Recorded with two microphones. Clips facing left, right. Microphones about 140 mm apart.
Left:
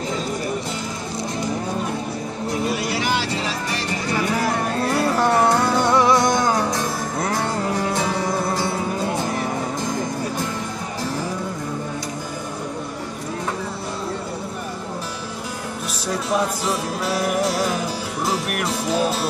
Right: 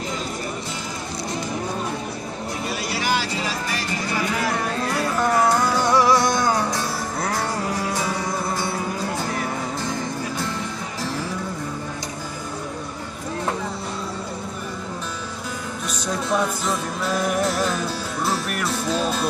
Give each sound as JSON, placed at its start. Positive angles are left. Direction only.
{"t": 2.9, "sound": "vehicle", "side_deg": 20}
{"t": 4.9, "sound": "music", "side_deg": 35}
{"t": 15.9, "sound": "music", "side_deg": 10}